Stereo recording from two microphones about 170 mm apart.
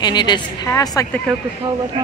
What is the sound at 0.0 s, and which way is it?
Speech, 25° left (ahead or behind).